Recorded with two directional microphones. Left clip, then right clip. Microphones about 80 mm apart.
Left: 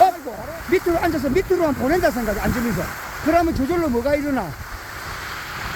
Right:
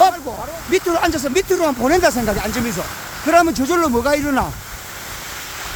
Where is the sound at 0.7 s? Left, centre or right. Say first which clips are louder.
Right 2 dB; right.